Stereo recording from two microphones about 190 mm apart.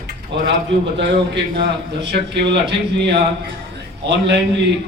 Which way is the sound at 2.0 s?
65° right (ahead or behind).